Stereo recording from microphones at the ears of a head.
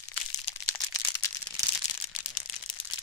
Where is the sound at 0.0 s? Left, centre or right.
Left.